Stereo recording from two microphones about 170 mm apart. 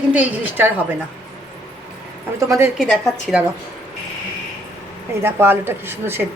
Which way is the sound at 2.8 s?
Centre (ahead or behind).